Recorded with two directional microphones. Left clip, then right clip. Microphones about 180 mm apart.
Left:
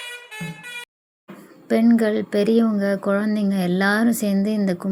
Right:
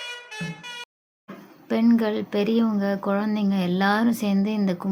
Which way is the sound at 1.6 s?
15° left (ahead or behind).